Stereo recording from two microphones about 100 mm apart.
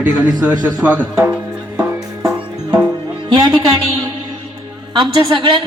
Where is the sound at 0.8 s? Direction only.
20° right (ahead or behind).